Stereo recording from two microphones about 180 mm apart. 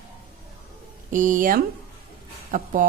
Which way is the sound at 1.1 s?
45° right (ahead or behind).